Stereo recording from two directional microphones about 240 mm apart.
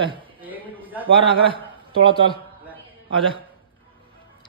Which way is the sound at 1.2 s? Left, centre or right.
Right.